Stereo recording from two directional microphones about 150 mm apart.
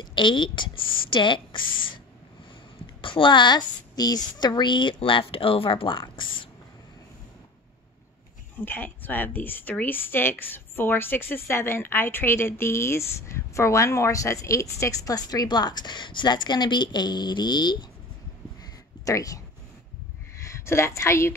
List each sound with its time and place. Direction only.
0.0 s speech: 30° left (ahead or behind)
3.0 s a woman's voice: 35° left (ahead or behind)
8.6 s a woman's voice: 15° left (ahead or behind); by 17.8 s 30° left (ahead or behind)
18.6 s a sound: 20° left (ahead or behind)
20.4 s speech: 20° left (ahead or behind)